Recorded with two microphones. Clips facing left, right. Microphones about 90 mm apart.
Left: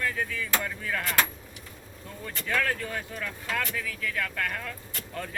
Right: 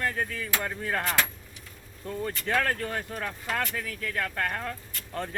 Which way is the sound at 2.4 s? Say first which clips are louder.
Even; 40° right (ahead or behind).